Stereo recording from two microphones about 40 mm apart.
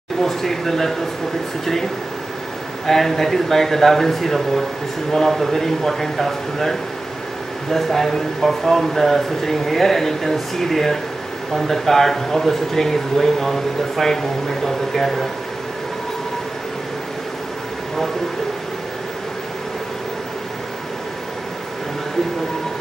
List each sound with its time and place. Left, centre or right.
0.2 s speech: centre
2.9 s speech: centre